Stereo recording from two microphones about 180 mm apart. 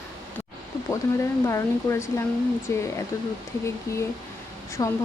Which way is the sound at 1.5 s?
15° left (ahead or behind).